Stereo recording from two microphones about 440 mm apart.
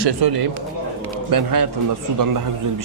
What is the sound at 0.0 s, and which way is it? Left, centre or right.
Speech, right.